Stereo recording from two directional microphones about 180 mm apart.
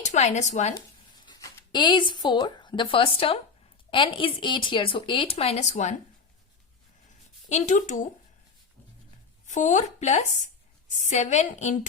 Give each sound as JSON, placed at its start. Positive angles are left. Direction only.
{"t": 0.0, "sound": "speech", "side_deg": 40}
{"t": 1.2, "sound": "speech", "side_deg": 25}
{"t": 7.5, "sound": "speech", "side_deg": 40}
{"t": 9.5, "sound": "speech", "side_deg": 40}